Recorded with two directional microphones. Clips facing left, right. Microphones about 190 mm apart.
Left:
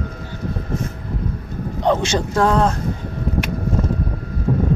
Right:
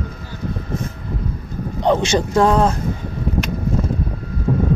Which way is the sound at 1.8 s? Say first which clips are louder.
Right 2 dB; 15° right (ahead or behind).